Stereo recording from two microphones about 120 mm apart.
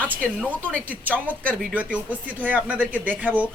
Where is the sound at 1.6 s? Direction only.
10° right (ahead or behind).